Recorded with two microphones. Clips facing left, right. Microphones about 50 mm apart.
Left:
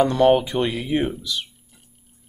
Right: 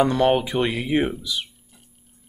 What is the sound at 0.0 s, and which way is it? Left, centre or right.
Speech, centre.